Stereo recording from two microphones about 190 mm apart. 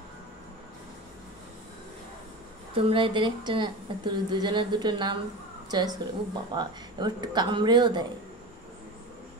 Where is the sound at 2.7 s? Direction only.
25° right (ahead or behind).